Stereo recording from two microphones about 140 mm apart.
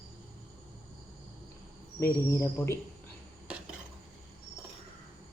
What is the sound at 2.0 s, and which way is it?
Speech, 20° left (ahead or behind).